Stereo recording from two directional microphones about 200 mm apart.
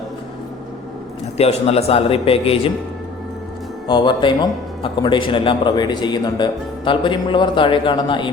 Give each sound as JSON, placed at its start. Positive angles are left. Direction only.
{"t": 1.4, "sound": "a man's voice", "side_deg": 30}
{"t": 3.8, "sound": "a man's voice", "side_deg": 25}